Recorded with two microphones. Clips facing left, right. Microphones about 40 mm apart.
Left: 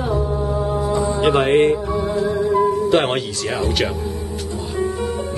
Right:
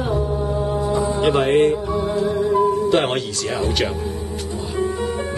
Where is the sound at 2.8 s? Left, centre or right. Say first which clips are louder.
Left 1 dB; centre.